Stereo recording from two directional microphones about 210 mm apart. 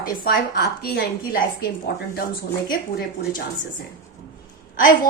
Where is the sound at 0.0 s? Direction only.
50° left (ahead or behind).